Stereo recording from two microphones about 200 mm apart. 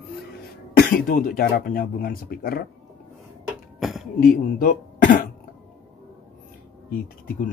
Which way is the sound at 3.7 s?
Centre (ahead or behind).